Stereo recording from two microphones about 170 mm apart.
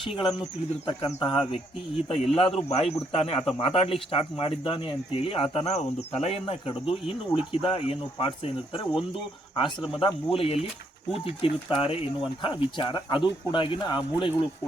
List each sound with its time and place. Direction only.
0.0 s speech: 30° left (ahead or behind)